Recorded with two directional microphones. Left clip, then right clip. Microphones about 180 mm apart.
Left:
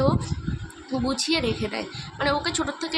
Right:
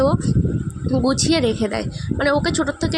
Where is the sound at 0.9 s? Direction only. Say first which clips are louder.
Right 6 dB; 40° right (ahead or behind).